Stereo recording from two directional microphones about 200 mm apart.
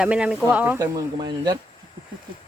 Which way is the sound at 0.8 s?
20° right (ahead or behind).